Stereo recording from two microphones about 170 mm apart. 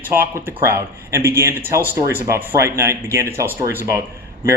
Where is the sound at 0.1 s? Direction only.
15° right (ahead or behind).